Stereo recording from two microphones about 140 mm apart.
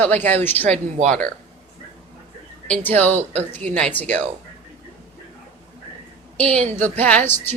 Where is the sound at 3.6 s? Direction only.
60° right (ahead or behind).